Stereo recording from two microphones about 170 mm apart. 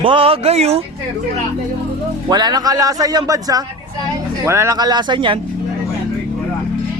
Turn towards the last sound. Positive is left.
turn(degrees=-30)  # may be behind; listen again after turning